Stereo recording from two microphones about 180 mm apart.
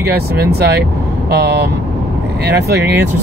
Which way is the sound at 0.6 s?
60° right (ahead or behind).